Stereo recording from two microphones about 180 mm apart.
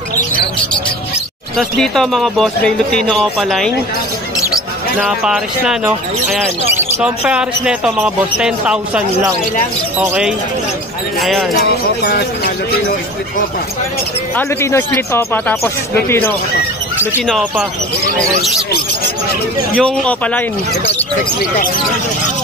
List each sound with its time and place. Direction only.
1.6 s speech: centre (ahead or behind)
4.9 s speech: centre (ahead or behind)
6.8 s speech: 5° right (ahead or behind)
11.6 s speech: 60° left (ahead or behind)
14.3 s speech: 15° left (ahead or behind)
17.3 s speech: centre (ahead or behind)
19.8 s speech: 5° left (ahead or behind)